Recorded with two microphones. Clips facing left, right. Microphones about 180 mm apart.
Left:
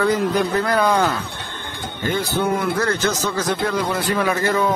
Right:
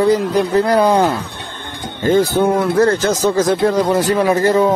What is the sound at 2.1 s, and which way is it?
Speech, 40° right (ahead or behind).